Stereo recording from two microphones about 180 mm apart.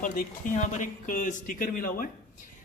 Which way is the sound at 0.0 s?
45° left (ahead or behind).